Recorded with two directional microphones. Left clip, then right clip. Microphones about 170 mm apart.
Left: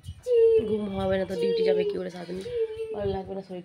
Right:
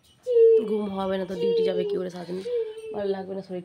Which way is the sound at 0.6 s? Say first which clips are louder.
Even; 15° right (ahead or behind).